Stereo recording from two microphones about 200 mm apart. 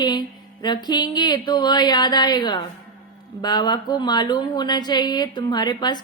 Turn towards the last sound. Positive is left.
turn(degrees=20)  # may be behind; listen again after turning